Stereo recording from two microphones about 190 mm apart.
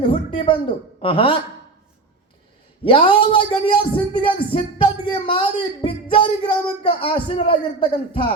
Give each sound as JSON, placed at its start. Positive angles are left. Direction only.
{"t": 0.0, "sound": "a sound", "side_deg": 25}
{"t": 1.0, "sound": "speech", "side_deg": 30}
{"t": 2.8, "sound": "speech", "side_deg": 25}